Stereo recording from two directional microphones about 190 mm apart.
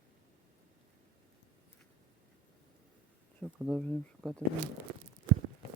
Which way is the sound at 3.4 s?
Centre (ahead or behind).